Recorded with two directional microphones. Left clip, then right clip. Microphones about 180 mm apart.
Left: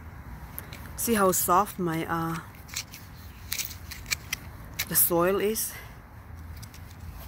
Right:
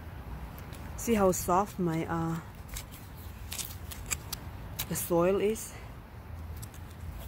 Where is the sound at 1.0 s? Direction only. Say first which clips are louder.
Left 3 dB; centre (ahead or behind).